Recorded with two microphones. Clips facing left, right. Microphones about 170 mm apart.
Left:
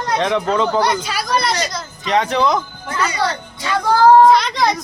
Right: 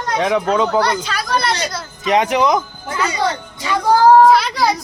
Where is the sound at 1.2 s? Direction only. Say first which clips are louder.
Even; centre (ahead or behind).